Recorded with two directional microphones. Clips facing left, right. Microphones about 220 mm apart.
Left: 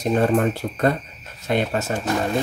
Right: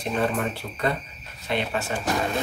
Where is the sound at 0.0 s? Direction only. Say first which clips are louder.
Left 7 dB; 45° left (ahead or behind).